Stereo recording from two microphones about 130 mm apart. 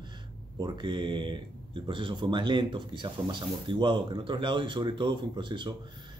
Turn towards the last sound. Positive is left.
turn(degrees=-35)  # may be behind; listen again after turning